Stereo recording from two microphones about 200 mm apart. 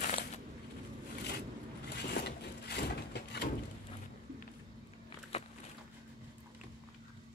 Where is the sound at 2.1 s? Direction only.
55° left (ahead or behind).